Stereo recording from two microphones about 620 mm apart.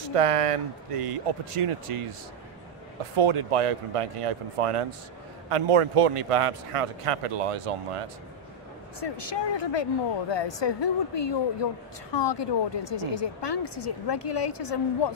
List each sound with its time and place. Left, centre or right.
0.1 s a man's voice: right
3.2 s a man's voice: right
9.0 s a woman's voice: left